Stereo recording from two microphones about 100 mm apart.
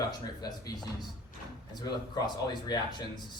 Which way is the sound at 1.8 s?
45° left (ahead or behind).